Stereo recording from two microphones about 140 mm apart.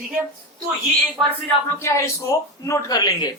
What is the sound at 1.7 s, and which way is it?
Speech, 20° left (ahead or behind).